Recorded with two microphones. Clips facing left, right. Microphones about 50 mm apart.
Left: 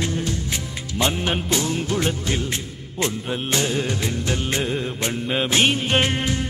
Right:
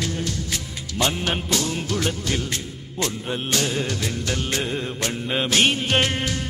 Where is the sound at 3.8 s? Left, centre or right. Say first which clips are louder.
Left 2 dB; centre.